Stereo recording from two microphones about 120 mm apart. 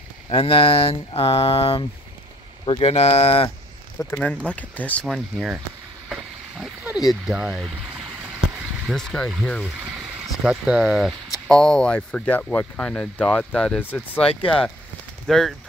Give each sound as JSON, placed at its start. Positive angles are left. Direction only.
{"t": 0.3, "sound": "a sound", "side_deg": 50}
{"t": 2.6, "sound": "speech", "side_deg": 45}
{"t": 2.9, "sound": "speech", "side_deg": 60}
{"t": 4.1, "sound": "speech", "side_deg": 10}
{"t": 5.0, "sound": "speech", "side_deg": -5}
{"t": 6.6, "sound": "oink", "side_deg": -10}
{"t": 7.1, "sound": "speech", "side_deg": -5}
{"t": 8.8, "sound": "speech", "side_deg": 5}
{"t": 10.4, "sound": "speech", "side_deg": -5}
{"t": 15.2, "sound": "speech", "side_deg": 0}